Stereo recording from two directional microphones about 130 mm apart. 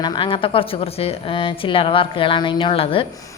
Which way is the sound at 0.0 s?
40° left (ahead or behind).